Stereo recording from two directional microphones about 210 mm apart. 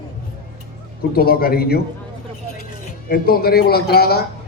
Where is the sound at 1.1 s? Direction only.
45° left (ahead or behind).